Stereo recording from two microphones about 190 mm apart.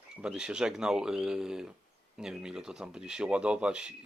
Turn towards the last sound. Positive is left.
turn(degrees=-5)  # may be behind; listen again after turning